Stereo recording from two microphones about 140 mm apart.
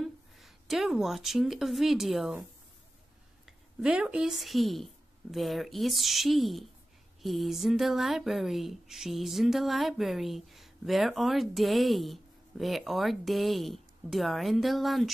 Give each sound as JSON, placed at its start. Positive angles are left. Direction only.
{"t": 0.0, "sound": "speech", "side_deg": 0}
{"t": 3.4, "sound": "a woman's voice", "side_deg": -5}